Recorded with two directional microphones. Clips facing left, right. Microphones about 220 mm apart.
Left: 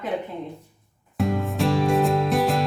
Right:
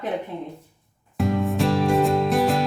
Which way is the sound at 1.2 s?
Centre (ahead or behind).